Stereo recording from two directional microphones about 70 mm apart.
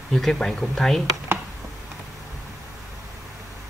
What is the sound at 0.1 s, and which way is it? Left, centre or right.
Speech, centre.